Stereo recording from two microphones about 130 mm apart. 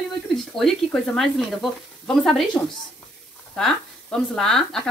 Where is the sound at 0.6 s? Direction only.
5° left (ahead or behind).